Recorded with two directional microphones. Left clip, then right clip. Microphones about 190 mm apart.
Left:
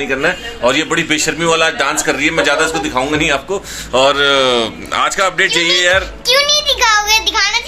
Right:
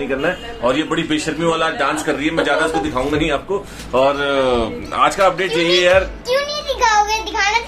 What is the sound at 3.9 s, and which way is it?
Speech, 5° left (ahead or behind).